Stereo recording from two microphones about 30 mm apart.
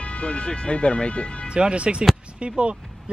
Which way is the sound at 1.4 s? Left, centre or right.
Right.